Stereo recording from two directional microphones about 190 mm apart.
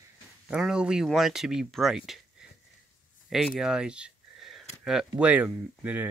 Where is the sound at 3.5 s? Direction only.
5° right (ahead or behind).